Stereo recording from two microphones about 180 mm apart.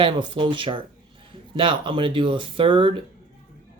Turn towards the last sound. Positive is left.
turn(degrees=-30)  # may be behind; listen again after turning